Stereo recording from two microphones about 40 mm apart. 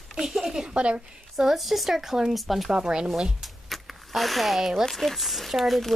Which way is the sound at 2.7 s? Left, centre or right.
Centre.